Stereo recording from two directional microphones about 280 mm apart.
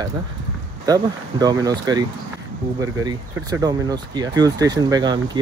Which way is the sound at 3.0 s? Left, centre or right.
Centre.